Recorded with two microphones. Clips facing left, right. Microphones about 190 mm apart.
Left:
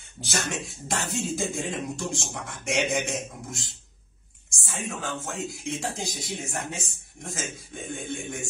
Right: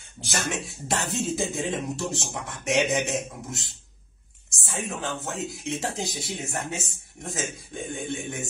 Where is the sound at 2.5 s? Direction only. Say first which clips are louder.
Right 3 dB; centre (ahead or behind).